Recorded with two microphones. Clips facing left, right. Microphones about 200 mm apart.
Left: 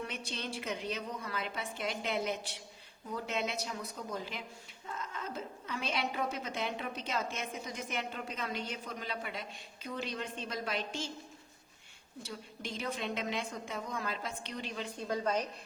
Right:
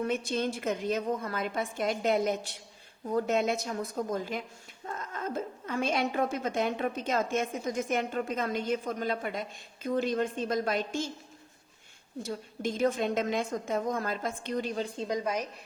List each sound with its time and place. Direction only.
0.0 s a woman's voice: 45° right (ahead or behind)
12.2 s a woman's voice: 45° right (ahead or behind)
14.9 s a woman's voice: 15° right (ahead or behind)